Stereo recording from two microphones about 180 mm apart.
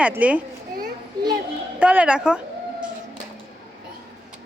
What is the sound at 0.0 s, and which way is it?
Speech, 10° right (ahead or behind).